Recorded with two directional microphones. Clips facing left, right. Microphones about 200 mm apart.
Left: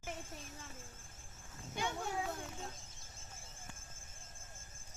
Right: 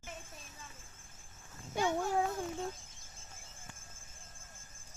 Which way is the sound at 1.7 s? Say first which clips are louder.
Right 8 dB; 55° right (ahead or behind).